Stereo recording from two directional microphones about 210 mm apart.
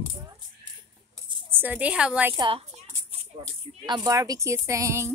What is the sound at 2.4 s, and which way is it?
Speech, 25° right (ahead or behind).